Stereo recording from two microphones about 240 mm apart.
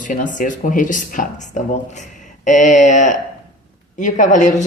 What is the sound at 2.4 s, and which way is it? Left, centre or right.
A woman's voice, left.